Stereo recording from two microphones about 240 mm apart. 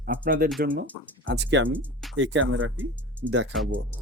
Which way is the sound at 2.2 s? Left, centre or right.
Right.